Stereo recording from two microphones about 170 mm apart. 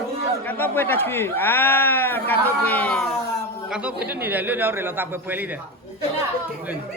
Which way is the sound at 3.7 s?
5° right (ahead or behind).